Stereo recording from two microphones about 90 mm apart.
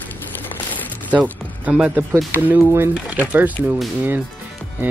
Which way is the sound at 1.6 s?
15° right (ahead or behind).